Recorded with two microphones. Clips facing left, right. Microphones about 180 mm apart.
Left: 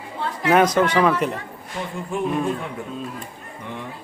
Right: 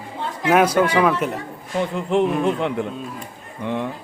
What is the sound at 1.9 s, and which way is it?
Speech, 75° right (ahead or behind).